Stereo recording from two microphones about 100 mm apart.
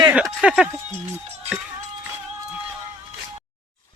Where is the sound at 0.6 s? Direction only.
25° right (ahead or behind).